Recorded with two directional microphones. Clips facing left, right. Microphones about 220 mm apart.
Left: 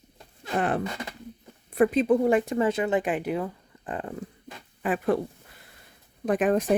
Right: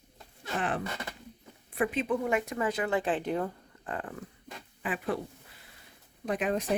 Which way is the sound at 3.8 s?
20° left (ahead or behind).